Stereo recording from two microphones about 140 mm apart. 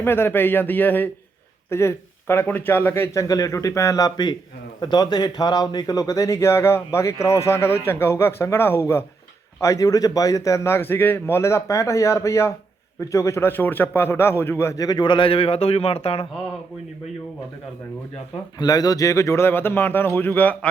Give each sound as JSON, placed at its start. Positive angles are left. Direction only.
{"t": 0.0, "sound": "a man's voice", "side_deg": 15}
{"t": 18.6, "sound": "a man's voice", "side_deg": 25}